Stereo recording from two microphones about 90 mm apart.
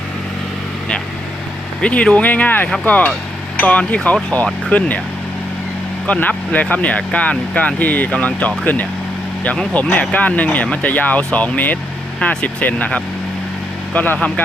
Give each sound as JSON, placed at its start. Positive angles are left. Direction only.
{"t": 1.8, "sound": "speech", "side_deg": 15}
{"t": 6.1, "sound": "speech", "side_deg": 15}